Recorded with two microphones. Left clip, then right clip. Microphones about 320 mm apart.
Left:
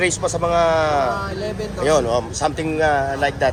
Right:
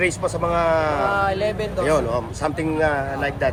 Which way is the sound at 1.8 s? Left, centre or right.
Centre.